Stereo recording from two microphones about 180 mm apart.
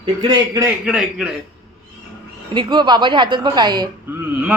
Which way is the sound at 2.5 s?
25° right (ahead or behind).